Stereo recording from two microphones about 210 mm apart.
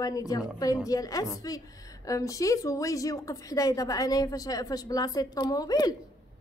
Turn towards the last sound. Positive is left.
turn(degrees=20)  # may be behind; listen again after turning